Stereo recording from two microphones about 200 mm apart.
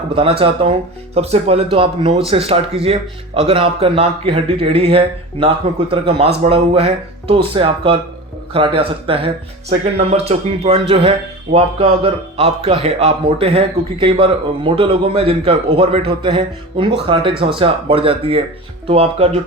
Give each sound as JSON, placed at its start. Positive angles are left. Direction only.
{"t": 0.1, "sound": "a man's voice", "side_deg": -30}